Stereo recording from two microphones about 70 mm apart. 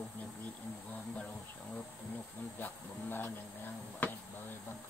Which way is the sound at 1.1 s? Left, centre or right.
Centre.